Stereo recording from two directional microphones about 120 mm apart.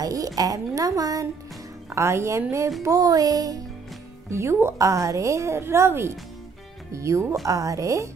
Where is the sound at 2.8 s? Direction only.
30° right (ahead or behind).